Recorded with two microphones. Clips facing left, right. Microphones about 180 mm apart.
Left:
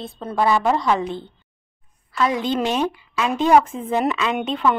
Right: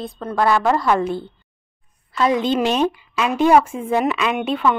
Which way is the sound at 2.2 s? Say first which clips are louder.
Right 3 dB; 20° right (ahead or behind).